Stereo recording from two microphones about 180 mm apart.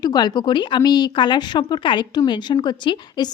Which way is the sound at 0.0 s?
25° left (ahead or behind).